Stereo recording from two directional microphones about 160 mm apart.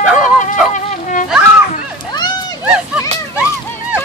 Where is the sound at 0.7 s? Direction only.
55° left (ahead or behind).